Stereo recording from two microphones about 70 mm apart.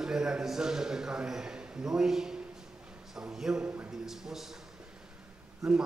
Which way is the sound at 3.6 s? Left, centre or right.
Right.